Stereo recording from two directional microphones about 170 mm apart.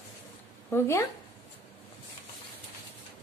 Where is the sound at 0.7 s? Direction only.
15° left (ahead or behind).